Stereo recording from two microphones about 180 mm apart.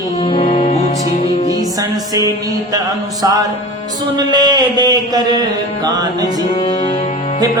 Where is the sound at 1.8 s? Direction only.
20° right (ahead or behind).